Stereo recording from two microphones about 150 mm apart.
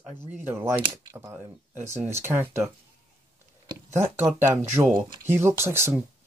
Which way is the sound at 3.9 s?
15° right (ahead or behind).